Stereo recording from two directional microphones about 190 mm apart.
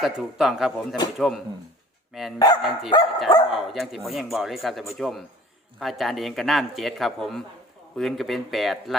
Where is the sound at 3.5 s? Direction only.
Centre (ahead or behind).